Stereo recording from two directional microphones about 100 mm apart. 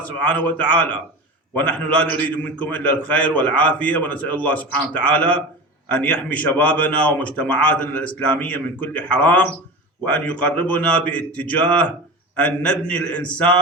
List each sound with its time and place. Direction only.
0.0 s a man's voice: 15° left (ahead or behind)